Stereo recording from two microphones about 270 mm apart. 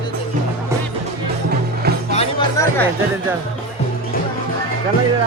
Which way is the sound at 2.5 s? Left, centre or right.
Centre.